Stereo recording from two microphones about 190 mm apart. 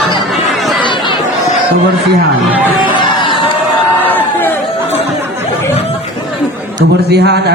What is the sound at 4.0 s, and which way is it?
Crowd, 10° left (ahead or behind).